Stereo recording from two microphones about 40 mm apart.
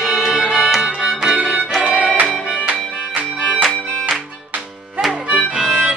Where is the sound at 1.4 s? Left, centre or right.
Right.